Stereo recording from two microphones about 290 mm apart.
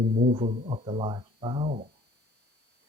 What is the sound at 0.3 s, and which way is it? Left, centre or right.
Speech, right.